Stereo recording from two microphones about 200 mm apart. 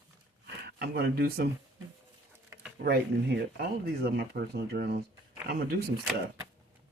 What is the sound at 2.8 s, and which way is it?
Speech, 55° right (ahead or behind).